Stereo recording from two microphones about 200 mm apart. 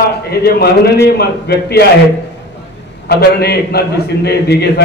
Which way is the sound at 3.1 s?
50° left (ahead or behind).